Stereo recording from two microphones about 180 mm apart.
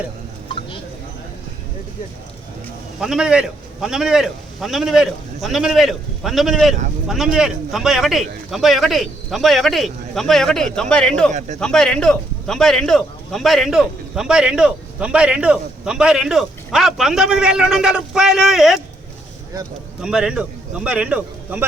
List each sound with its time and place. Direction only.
3.0 s speech: 5° right (ahead or behind)
11.3 s a man's voice: 40° right (ahead or behind)
11.6 s speech: 5° left (ahead or behind)
20.0 s a man's voice: 5° right (ahead or behind)